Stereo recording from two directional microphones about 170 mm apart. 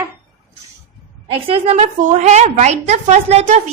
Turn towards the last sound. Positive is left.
turn(degrees=-40)  # may be behind; listen again after turning